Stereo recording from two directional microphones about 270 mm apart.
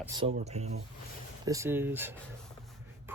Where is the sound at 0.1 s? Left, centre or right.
Centre.